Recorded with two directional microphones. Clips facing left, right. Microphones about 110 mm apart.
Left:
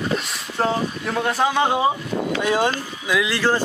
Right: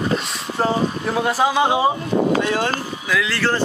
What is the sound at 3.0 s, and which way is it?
Speech, 15° left (ahead or behind).